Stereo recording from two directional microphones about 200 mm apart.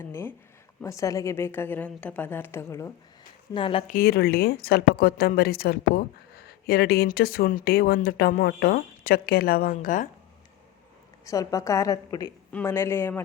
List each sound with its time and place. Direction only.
0.0 s a woman's voice: 10° left (ahead or behind)
3.5 s speech: 25° left (ahead or behind)
3.8 s speech: 45° left (ahead or behind)
11.3 s a woman's voice: 15° left (ahead or behind)